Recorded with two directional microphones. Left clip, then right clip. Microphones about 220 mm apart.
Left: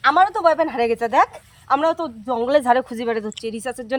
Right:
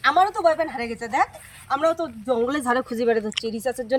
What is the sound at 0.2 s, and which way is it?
Speech, 30° left (ahead or behind).